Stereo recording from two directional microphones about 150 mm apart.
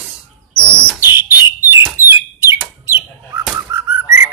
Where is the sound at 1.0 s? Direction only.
15° right (ahead or behind).